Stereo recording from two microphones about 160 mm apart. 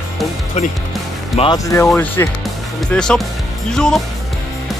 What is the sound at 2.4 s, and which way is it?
Music, 5° left (ahead or behind).